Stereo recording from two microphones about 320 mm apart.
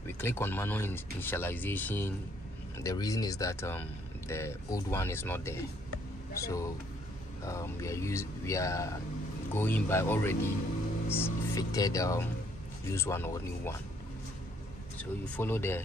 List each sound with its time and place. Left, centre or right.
0.0 s speech: centre
15.0 s speech: centre